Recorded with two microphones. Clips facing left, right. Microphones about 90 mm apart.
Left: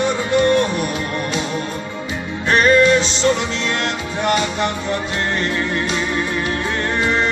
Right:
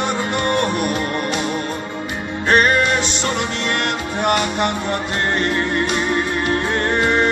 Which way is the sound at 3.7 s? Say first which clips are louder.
Right 1 dB; 55° right (ahead or behind).